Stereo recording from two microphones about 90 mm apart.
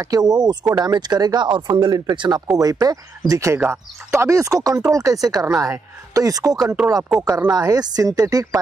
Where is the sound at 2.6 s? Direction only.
45° right (ahead or behind).